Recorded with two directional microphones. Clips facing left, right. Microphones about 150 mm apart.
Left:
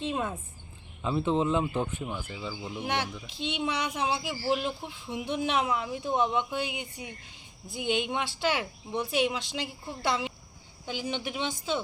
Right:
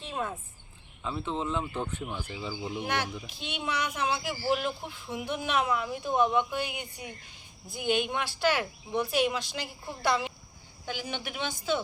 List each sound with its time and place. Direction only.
0.0 s a woman's voice: 20° left (ahead or behind); by 2.6 s centre (ahead or behind)
2.8 s a woman's voice: 25° left (ahead or behind)